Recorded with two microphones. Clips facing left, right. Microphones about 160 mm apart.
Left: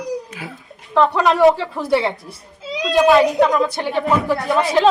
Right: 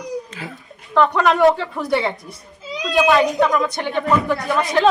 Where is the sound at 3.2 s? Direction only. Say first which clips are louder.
Left 2 dB; centre (ahead or behind).